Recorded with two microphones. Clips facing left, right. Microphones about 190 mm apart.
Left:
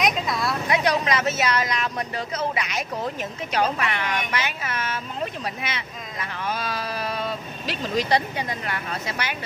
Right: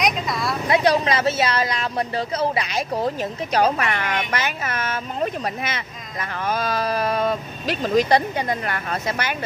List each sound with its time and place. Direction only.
0.0 s speech: centre (ahead or behind)
0.7 s speech: 30° right (ahead or behind); by 9.4 s 50° right (ahead or behind)